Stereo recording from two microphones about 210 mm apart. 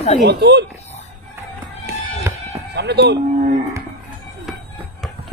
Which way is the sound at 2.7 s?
55° right (ahead or behind).